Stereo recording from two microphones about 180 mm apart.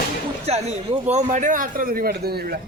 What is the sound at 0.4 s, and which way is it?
Speech, 35° right (ahead or behind).